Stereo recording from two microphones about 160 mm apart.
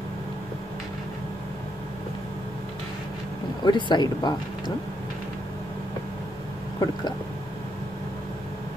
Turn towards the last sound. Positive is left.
turn(degrees=25)  # may be behind; listen again after turning